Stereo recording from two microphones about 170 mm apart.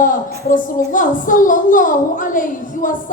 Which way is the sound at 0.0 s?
50° left (ahead or behind).